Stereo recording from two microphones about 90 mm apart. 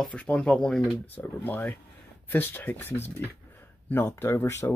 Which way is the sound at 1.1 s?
20° left (ahead or behind).